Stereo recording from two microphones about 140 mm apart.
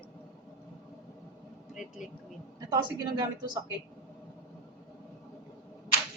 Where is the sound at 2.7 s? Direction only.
30° right (ahead or behind).